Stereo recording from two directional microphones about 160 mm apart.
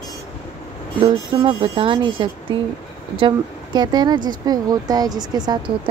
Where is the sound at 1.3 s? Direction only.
35° right (ahead or behind).